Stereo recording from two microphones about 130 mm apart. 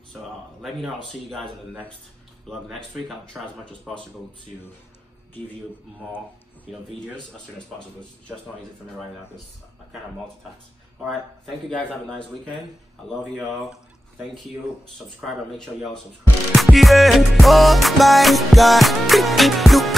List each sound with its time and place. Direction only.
0.6 s music: centre (ahead or behind)
6.7 s music: 5° right (ahead or behind)
11.7 s a man's voice: 5° left (ahead or behind)
13.2 s music: centre (ahead or behind)
15.1 s music: 5° left (ahead or behind)